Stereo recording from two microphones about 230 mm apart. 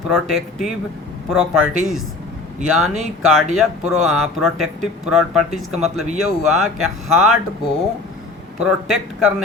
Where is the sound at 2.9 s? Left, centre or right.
Centre.